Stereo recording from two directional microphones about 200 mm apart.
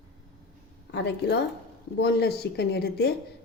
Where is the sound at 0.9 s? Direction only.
55° left (ahead or behind).